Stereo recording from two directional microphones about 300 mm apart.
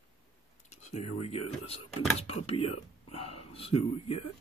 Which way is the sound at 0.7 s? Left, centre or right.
Left.